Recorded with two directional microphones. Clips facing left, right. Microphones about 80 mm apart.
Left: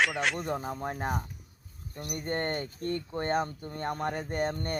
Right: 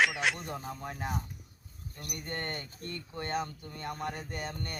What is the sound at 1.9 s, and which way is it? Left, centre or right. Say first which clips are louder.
Speech: left 7 dB; left.